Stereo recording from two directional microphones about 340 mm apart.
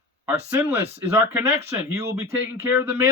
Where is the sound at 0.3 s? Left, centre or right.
Centre.